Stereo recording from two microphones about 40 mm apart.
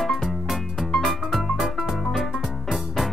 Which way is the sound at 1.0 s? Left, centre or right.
Centre.